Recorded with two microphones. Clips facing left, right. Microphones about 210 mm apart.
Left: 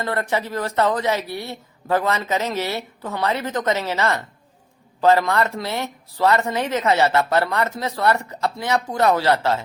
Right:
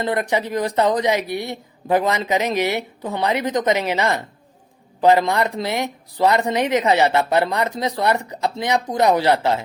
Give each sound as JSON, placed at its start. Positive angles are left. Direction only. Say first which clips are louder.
{"t": 0.0, "sound": "speech", "louder": "right 3 dB", "side_deg": -15}